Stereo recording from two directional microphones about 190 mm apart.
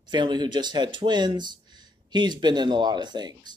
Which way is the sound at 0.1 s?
25° right (ahead or behind).